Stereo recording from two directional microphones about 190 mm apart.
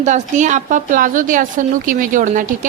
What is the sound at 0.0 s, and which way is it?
A woman's voice, 40° right (ahead or behind).